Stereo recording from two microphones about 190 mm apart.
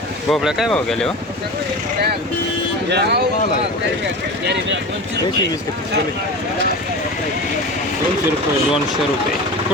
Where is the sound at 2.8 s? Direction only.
60° right (ahead or behind).